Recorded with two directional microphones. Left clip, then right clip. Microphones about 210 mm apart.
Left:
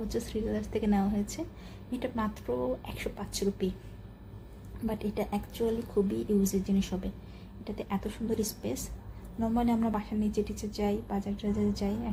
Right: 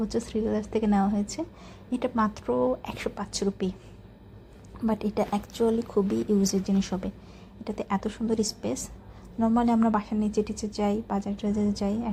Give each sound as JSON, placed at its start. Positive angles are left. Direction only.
{"t": 0.1, "sound": "a woman's voice", "side_deg": -15}
{"t": 4.9, "sound": "a woman's voice", "side_deg": -15}